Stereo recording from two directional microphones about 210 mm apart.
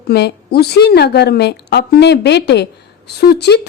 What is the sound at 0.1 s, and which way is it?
A woman's voice, 50° left (ahead or behind).